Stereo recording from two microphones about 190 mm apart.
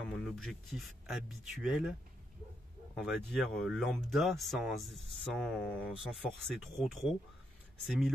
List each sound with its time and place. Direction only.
0.1 s speech: centre (ahead or behind)